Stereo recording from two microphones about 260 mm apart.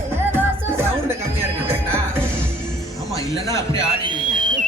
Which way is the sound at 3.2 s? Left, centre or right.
Centre.